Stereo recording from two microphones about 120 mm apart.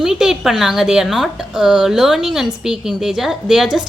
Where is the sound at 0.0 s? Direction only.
5° right (ahead or behind).